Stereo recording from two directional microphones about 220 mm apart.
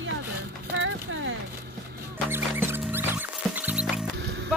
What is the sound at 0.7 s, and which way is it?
Speech, 60° right (ahead or behind).